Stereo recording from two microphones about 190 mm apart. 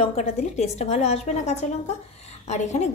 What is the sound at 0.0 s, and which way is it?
A woman's voice, 35° left (ahead or behind).